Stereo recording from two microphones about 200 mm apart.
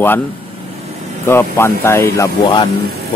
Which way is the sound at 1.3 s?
10° left (ahead or behind).